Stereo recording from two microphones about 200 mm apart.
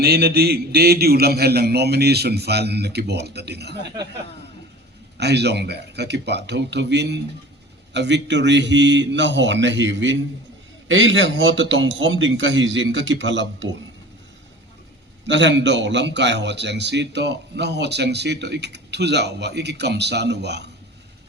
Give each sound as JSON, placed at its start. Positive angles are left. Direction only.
{"t": 0.0, "sound": "a man's voice", "side_deg": -50}
{"t": 5.1, "sound": "a man's voice", "side_deg": -55}
{"t": 15.3, "sound": "a man's voice", "side_deg": -65}